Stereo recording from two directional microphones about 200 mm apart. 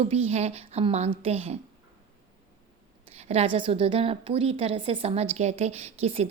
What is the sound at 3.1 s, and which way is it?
A woman's voice, 30° right (ahead or behind).